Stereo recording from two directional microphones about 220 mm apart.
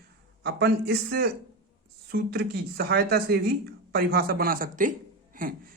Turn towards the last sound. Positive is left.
turn(degrees=-40)  # may be behind; listen again after turning